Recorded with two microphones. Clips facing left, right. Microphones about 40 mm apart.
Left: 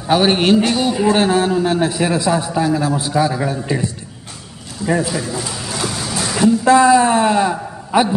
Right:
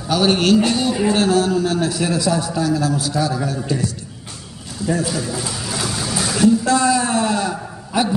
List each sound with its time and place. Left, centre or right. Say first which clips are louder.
0.1 s a man's voice: left 2 dB; left
5.0 s a sound: left 1 dB; centre
6.6 s a man's voice: left 6 dB; left